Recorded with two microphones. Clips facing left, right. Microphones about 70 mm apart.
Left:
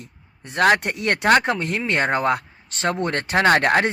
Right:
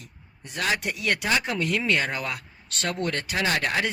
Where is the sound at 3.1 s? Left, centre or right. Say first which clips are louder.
Left 9 dB; left.